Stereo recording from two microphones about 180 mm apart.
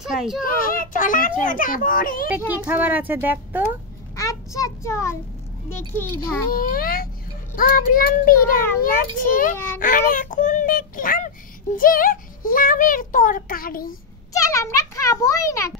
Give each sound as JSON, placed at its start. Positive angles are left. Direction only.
{"t": 0.0, "sound": "a child's voice", "side_deg": -5}
{"t": 0.4, "sound": "child singing", "side_deg": 50}
{"t": 2.5, "sound": "a child's voice", "side_deg": -10}
{"t": 4.2, "sound": "child singing", "side_deg": 20}
{"t": 6.5, "sound": "speech", "side_deg": 50}
{"t": 7.5, "sound": "child singing", "side_deg": 50}
{"t": 9.8, "sound": "speech", "side_deg": 50}
{"t": 14.3, "sound": "a child's voice", "side_deg": 20}